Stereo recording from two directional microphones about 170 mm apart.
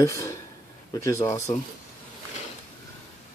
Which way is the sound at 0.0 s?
20° left (ahead or behind).